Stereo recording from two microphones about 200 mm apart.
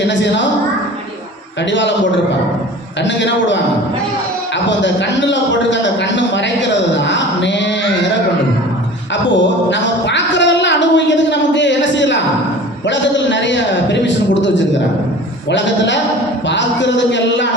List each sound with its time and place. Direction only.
0.1 s a man's voice: 65° left (ahead or behind)
3.0 s a man's voice: 65° left (ahead or behind)
4.8 s a man's voice: 65° left (ahead or behind)
9.3 s a man's voice: 65° left (ahead or behind)